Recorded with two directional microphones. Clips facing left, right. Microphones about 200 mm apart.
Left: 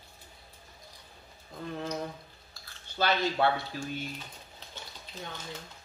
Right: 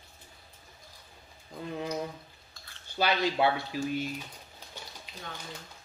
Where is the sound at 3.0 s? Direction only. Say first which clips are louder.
Right 1 dB; 10° right (ahead or behind).